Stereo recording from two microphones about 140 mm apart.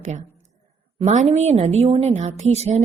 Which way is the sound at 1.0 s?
50° right (ahead or behind).